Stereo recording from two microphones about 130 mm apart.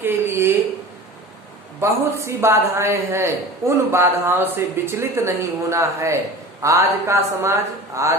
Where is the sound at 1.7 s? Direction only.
20° right (ahead or behind).